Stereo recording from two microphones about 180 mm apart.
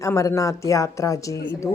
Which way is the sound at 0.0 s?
15° left (ahead or behind).